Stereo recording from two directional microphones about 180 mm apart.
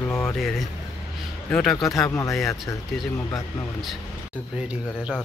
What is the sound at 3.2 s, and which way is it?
Speech, 15° left (ahead or behind).